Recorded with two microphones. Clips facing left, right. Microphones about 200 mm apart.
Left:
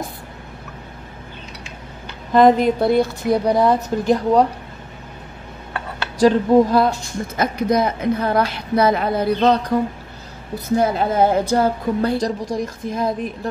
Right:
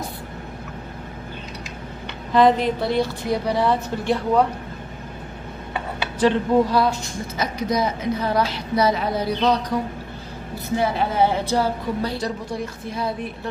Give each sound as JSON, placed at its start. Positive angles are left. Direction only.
{"t": 2.3, "sound": "a woman's voice", "side_deg": 45}
{"t": 6.1, "sound": "a woman's voice", "side_deg": 45}
{"t": 7.3, "sound": "a woman's voice", "side_deg": 55}
{"t": 10.8, "sound": "a woman's voice", "side_deg": 45}